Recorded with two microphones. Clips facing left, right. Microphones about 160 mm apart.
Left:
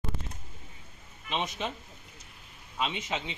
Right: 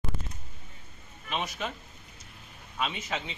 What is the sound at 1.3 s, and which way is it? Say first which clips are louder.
Speech: left 1 dB; 20° left (ahead or behind).